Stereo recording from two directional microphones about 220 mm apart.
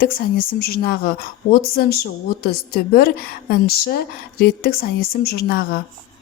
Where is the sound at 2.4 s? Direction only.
45° left (ahead or behind).